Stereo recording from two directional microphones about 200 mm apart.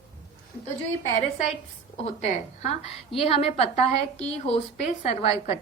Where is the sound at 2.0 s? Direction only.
35° left (ahead or behind).